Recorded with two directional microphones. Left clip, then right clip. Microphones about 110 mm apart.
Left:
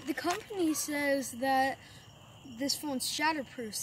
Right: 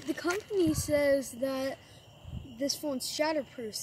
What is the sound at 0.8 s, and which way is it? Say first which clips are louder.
Speech: right 5 dB; 40° left (ahead or behind).